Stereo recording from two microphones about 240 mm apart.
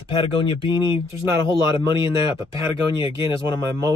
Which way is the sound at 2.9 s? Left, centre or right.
Left.